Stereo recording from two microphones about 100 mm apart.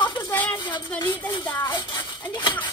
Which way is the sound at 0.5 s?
50° left (ahead or behind).